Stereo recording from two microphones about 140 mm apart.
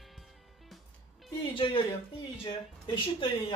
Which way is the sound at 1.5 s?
40° left (ahead or behind).